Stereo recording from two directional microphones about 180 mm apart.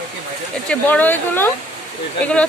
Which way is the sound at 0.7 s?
10° left (ahead or behind).